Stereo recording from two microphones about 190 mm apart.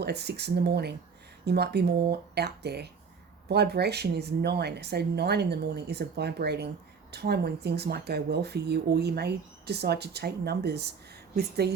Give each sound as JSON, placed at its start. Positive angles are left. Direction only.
{"t": 0.0, "sound": "speech", "side_deg": -60}